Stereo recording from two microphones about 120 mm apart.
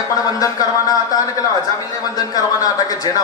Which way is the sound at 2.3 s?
30° left (ahead or behind).